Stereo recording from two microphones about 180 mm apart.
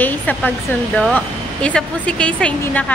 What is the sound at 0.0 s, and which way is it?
A woman's voice, 10° left (ahead or behind).